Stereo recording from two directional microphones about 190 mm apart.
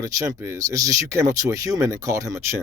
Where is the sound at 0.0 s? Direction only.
15° right (ahead or behind).